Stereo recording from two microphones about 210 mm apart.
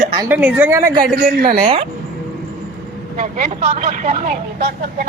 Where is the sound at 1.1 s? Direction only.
45° right (ahead or behind).